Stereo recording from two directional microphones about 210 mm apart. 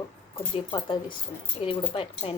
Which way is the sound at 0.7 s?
25° left (ahead or behind).